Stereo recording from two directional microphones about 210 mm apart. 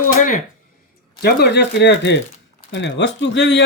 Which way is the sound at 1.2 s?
50° left (ahead or behind).